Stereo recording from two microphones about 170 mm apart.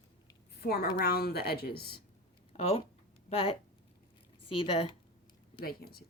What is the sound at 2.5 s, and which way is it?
Speech, 35° left (ahead or behind).